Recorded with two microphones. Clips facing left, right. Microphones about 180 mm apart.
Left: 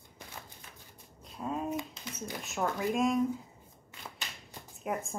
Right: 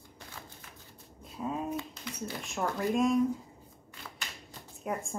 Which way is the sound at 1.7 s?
20° left (ahead or behind).